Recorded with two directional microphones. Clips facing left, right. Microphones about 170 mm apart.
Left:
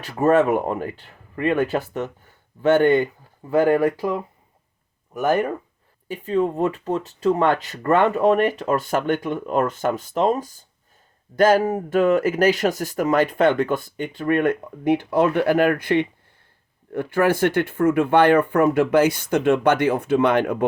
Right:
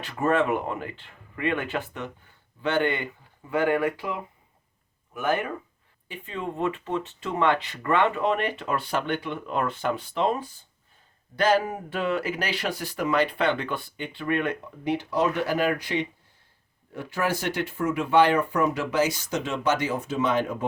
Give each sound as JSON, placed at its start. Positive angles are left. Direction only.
{"t": 0.0, "sound": "speech", "side_deg": 40}